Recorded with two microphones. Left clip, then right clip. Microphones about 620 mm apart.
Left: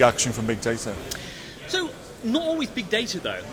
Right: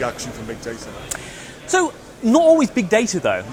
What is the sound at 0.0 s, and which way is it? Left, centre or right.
Speech, left.